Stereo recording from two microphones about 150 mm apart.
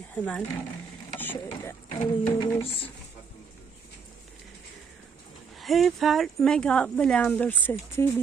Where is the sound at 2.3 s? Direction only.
40° left (ahead or behind).